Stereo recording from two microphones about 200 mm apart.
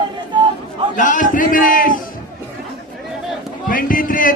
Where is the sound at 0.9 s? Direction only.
40° left (ahead or behind).